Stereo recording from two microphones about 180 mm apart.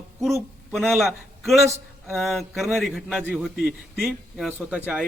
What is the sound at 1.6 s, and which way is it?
Speech, 15° right (ahead or behind).